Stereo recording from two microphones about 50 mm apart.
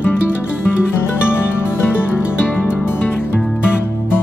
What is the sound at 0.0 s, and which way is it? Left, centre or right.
Music, left.